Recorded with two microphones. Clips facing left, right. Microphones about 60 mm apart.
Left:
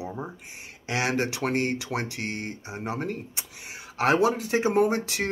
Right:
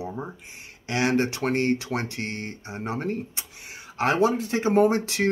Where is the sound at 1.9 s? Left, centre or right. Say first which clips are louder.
Right 1 dB; centre.